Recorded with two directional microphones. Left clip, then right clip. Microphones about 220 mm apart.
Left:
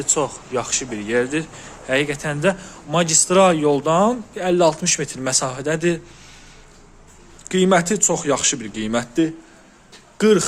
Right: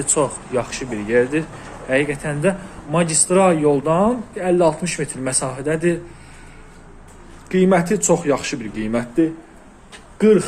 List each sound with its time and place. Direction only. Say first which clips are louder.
0.0 s a man's voice: right 2 dB; 10° left (ahead or behind)
7.4 s a man's voice: even; 25° left (ahead or behind)